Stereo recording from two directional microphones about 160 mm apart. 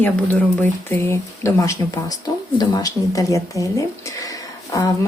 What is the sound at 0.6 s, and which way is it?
Speech, 15° left (ahead or behind).